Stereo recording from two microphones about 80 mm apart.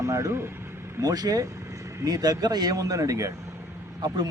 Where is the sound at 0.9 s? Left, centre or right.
Right.